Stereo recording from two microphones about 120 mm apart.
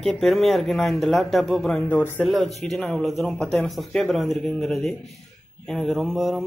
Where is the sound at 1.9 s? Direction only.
15° left (ahead or behind).